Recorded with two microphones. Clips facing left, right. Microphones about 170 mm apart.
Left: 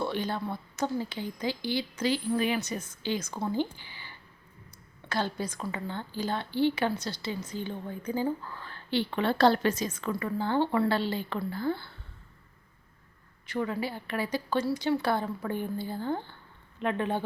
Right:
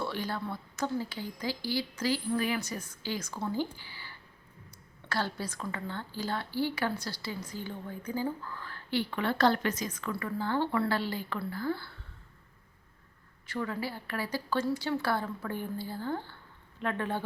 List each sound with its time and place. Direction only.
0.0 s a woman's voice: 20° left (ahead or behind)
13.5 s a woman's voice: 20° left (ahead or behind)